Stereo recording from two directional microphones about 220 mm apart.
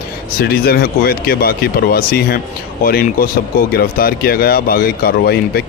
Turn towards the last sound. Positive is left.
turn(degrees=45)  # may be behind; listen again after turning